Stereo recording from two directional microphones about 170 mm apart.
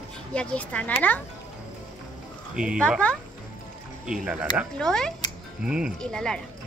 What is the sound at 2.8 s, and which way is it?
Speech, 5° left (ahead or behind).